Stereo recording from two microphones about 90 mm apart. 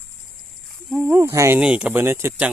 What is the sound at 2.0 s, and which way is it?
Speech, 30° right (ahead or behind).